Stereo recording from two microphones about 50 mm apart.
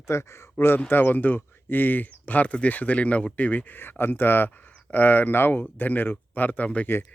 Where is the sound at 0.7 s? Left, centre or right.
Left.